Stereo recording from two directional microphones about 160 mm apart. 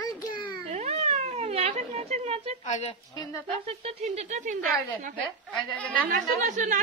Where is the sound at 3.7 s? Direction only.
40° right (ahead or behind).